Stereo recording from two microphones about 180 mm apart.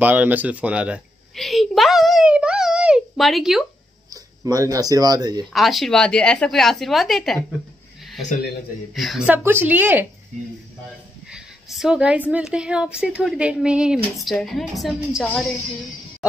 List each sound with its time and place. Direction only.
0.0 s a sound: 10° right (ahead or behind)
4.1 s speech: 20° right (ahead or behind)
5.5 s a woman's voice: centre (ahead or behind)
8.9 s a woman's voice: centre (ahead or behind)
11.2 s a woman's voice: 5° right (ahead or behind)